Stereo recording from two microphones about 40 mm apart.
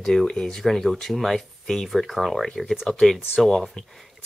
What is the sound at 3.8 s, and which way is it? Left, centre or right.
Speech, left.